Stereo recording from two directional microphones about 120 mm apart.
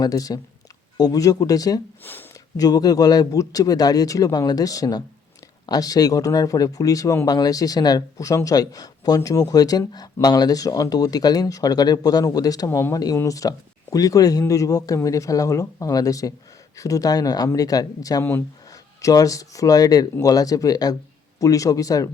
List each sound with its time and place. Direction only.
0.0 s speech: 30° left (ahead or behind)